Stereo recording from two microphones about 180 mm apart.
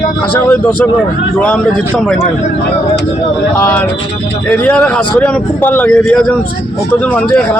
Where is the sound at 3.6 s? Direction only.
10° left (ahead or behind).